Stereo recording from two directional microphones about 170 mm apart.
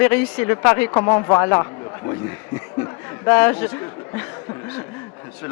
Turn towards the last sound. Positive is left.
turn(degrees=15)  # may be behind; listen again after turning